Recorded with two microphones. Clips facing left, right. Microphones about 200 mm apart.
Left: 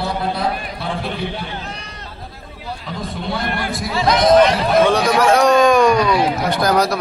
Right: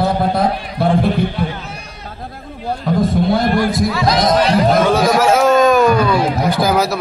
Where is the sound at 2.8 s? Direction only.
50° right (ahead or behind).